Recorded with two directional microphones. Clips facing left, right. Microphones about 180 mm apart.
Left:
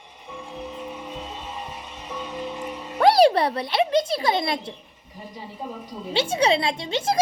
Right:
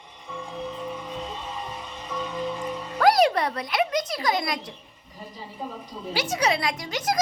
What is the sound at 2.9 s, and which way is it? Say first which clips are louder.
A child's voice: left 3 dB; 30° left (ahead or behind).